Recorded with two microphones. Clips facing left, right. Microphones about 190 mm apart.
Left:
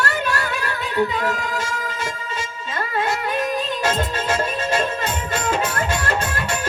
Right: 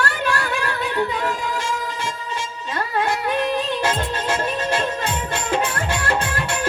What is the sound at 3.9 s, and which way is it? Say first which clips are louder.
Music: left 1 dB; 45° left (ahead or behind).